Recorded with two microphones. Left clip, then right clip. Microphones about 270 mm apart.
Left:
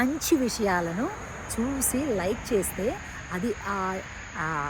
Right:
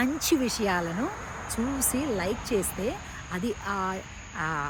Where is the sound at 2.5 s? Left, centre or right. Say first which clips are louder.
Left 3 dB; centre.